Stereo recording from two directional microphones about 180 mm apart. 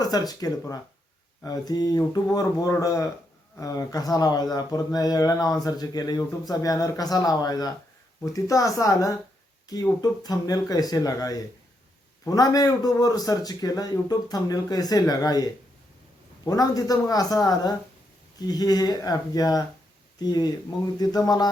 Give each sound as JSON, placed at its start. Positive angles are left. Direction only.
{"t": 0.0, "sound": "speech", "side_deg": 20}